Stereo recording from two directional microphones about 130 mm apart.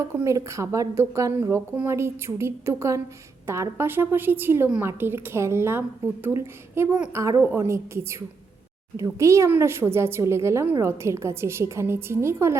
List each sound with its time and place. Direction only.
0.0 s a woman's voice: 20° right (ahead or behind)